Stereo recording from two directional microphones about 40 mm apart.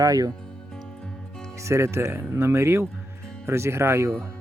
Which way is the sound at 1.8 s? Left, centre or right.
Right.